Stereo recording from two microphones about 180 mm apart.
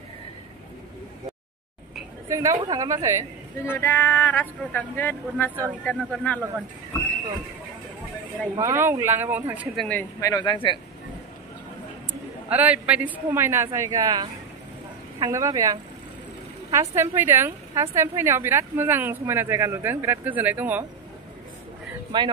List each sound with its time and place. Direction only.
2.2 s a woman's voice: 15° right (ahead or behind)
3.6 s speech: 10° left (ahead or behind)
8.5 s a woman's voice: 15° right (ahead or behind)
9.8 s speech: 15° left (ahead or behind)
12.1 s a woman's voice: 10° right (ahead or behind)
22.1 s a woman's voice: 25° right (ahead or behind)